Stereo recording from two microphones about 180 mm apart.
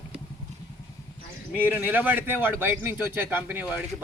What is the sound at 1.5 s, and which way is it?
Speech, 10° right (ahead or behind).